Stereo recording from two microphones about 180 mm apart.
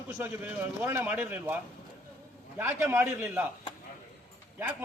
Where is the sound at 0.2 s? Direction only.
10° right (ahead or behind).